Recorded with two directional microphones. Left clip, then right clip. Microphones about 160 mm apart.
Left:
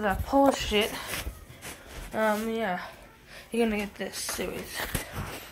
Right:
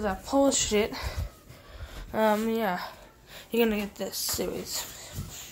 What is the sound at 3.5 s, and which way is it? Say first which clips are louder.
Speech: right 2 dB; 20° right (ahead or behind).